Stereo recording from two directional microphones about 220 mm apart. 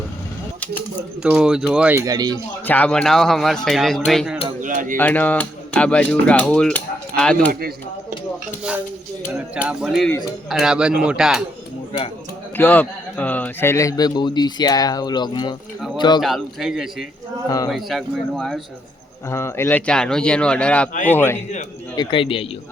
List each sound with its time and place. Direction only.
1.2 s cutlery: 5° right (ahead or behind)
2.6 s cutlery: 5° left (ahead or behind)
4.6 s a sound: 35° right (ahead or behind)
4.9 s cutlery: 5° left (ahead or behind)
9.6 s cutlery: 5° right (ahead or behind)
12.5 s speech: 10° left (ahead or behind)
16.2 s cutlery: centre (ahead or behind)
19.3 s cutlery: 10° left (ahead or behind)
21.1 s speech: 10° left (ahead or behind)
21.9 s speech: 25° left (ahead or behind)